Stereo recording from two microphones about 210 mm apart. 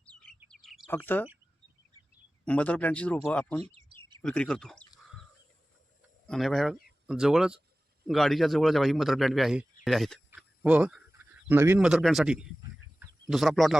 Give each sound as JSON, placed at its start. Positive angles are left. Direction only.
{"t": 0.1, "sound": "chirp", "side_deg": 5}
{"t": 0.5, "sound": "bird", "side_deg": 0}
{"t": 2.4, "sound": "speech", "side_deg": 5}
{"t": 3.6, "sound": "bird", "side_deg": -30}
{"t": 4.2, "sound": "speech", "side_deg": 5}
{"t": 6.2, "sound": "a man's voice", "side_deg": 0}